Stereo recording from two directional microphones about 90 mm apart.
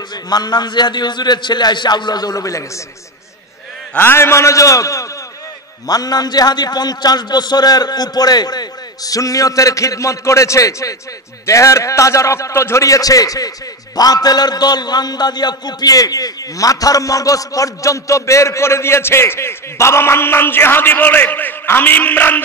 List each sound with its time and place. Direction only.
0.3 s a man's voice: 50° left (ahead or behind)
4.0 s a man's voice: 25° left (ahead or behind)